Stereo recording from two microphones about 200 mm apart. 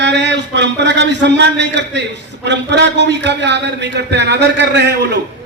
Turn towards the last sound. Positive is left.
turn(degrees=-60)  # may be behind; listen again after turning